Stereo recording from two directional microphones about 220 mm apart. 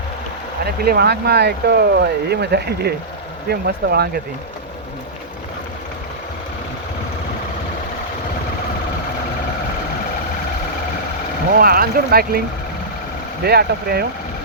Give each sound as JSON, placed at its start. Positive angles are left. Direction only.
{"t": 0.6, "sound": "speech", "side_deg": -45}
{"t": 11.6, "sound": "speech", "side_deg": -40}
{"t": 13.4, "sound": "speech", "side_deg": -45}